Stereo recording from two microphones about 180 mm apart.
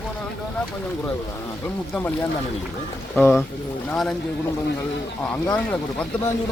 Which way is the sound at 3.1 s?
10° left (ahead or behind).